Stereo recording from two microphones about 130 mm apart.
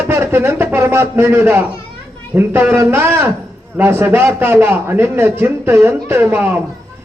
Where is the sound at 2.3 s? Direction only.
15° right (ahead or behind).